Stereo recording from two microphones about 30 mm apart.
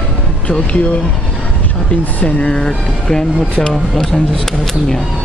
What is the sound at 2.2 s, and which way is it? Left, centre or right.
Speech, left.